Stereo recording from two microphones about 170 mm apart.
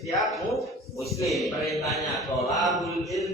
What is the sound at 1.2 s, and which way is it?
Speech, centre (ahead or behind).